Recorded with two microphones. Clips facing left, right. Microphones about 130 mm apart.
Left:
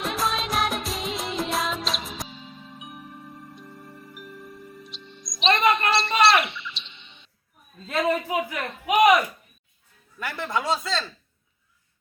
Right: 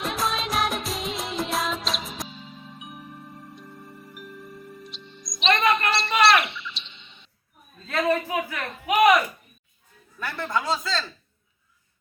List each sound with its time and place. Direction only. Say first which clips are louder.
0.0 s music of bollywood: left 1 dB; centre (ahead or behind)
2.7 s music: left 1 dB; centre (ahead or behind)
5.4 s music: left 1 dB; 35° left (ahead or behind)
5.9 s bird: even; centre (ahead or behind)
7.9 s a sound: even; 20° left (ahead or behind)
10.2 s speech: even; centre (ahead or behind)